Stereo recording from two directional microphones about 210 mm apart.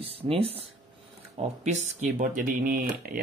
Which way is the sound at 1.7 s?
35° right (ahead or behind).